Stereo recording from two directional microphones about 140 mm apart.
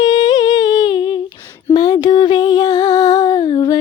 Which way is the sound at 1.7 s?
30° left (ahead or behind).